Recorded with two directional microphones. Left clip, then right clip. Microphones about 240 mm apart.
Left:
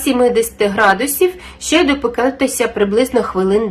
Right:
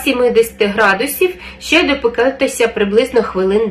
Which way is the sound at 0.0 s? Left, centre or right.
Left.